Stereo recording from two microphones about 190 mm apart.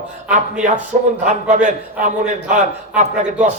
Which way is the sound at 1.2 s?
40° right (ahead or behind).